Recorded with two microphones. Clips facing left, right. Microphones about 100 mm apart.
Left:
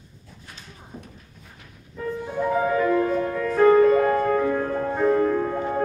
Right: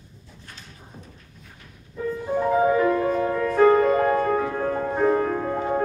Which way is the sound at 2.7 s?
10° right (ahead or behind).